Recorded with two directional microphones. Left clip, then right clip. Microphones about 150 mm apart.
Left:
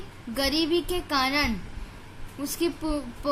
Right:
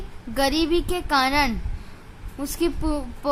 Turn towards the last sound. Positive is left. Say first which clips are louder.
# right 3 dB
turn(degrees=-35)  # may be behind; listen again after turning